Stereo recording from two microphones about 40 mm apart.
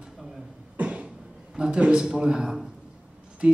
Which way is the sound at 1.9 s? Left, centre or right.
Centre.